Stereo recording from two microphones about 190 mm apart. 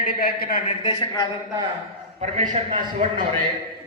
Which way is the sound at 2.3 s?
40° right (ahead or behind).